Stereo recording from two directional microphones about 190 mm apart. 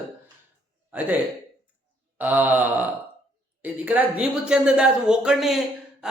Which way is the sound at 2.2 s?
10° right (ahead or behind).